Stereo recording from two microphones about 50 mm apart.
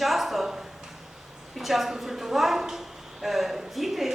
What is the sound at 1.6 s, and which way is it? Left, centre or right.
A woman's voice, centre.